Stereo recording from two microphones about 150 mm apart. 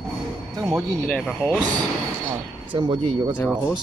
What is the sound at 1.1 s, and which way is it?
Speech, 10° left (ahead or behind).